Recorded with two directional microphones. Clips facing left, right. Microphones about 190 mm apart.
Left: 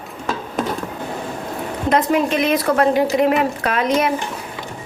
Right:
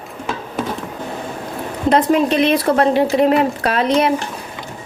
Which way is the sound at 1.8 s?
30° right (ahead or behind).